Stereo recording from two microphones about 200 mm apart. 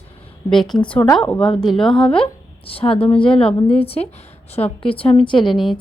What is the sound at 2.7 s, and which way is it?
A woman's voice, 30° left (ahead or behind).